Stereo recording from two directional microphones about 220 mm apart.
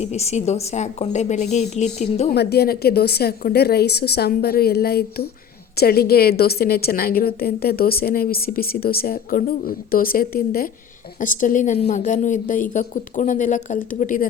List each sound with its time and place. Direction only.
0.0 s a woman's voice: 30° left (ahead or behind)
2.3 s a woman's voice: 45° left (ahead or behind)